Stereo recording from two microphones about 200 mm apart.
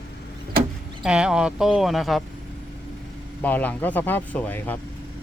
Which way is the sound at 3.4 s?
10° left (ahead or behind).